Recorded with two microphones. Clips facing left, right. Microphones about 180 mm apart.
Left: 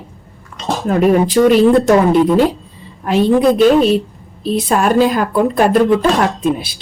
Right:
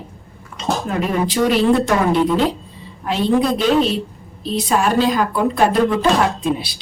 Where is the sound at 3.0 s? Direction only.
50° left (ahead or behind).